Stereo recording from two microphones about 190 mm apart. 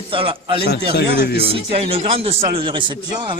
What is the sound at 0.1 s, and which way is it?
Speech, 25° right (ahead or behind).